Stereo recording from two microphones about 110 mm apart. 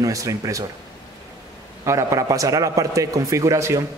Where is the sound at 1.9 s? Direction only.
30° right (ahead or behind).